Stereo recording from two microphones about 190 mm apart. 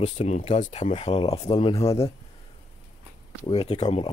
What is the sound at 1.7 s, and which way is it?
Speech, 15° left (ahead or behind).